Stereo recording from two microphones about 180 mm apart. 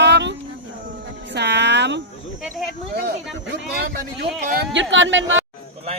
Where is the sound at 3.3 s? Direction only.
90° right.